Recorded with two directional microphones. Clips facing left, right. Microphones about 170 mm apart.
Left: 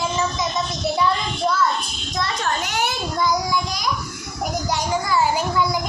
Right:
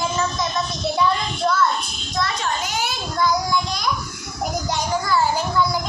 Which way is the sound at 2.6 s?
65° left (ahead or behind).